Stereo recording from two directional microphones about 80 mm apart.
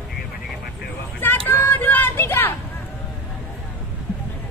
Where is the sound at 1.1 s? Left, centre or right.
Left.